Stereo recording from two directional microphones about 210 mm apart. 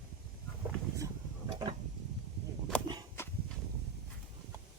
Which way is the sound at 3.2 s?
10° left (ahead or behind).